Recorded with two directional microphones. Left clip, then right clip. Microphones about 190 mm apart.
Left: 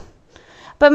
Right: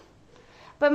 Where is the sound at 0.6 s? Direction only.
45° left (ahead or behind).